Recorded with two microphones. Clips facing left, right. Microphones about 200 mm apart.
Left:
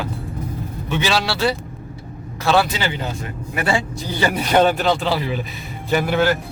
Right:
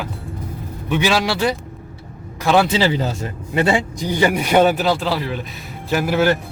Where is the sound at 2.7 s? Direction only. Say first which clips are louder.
Right 6 dB; 35° right (ahead or behind).